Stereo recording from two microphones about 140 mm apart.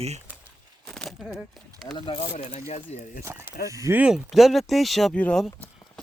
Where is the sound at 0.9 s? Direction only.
5° left (ahead or behind).